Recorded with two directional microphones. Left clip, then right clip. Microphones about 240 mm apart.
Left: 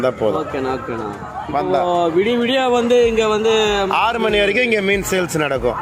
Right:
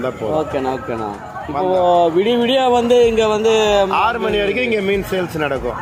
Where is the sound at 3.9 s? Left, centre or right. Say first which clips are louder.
Even; left.